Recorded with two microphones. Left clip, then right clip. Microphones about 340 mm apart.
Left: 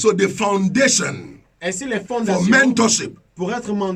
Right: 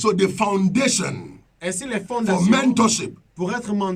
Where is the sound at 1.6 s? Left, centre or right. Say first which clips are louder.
Left 3 dB; right.